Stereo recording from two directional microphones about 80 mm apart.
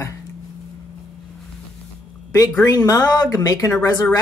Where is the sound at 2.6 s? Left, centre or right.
Left.